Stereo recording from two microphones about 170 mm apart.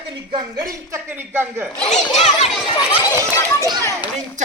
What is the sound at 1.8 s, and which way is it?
Speech, 40° left (ahead or behind).